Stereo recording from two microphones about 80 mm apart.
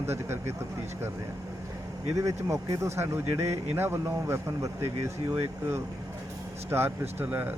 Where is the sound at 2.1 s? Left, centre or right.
Right.